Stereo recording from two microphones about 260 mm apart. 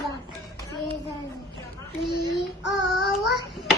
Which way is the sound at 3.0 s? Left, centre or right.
Left.